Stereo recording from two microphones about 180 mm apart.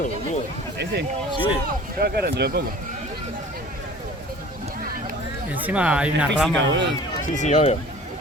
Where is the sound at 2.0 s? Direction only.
60° right (ahead or behind).